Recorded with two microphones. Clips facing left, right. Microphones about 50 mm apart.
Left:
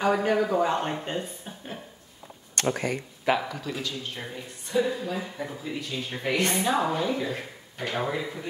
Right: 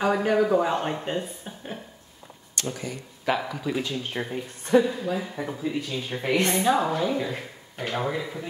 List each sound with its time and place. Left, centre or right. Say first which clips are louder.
0.0 s speech: right 1 dB; centre
2.5 s speech: left 5 dB; left
3.3 s speech: even; centre
3.8 s speech: right 3 dB; right
4.8 s a woman's voice: right 2 dB; centre; by 6.6 s right
6.6 s speech: right 2 dB; centre